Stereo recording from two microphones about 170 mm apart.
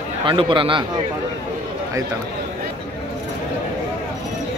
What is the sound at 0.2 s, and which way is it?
Speech, 30° right (ahead or behind).